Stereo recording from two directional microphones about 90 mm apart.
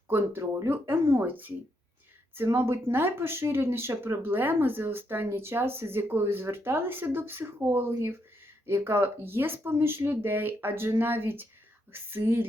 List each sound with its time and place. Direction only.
0.1 s speech: 30° right (ahead or behind)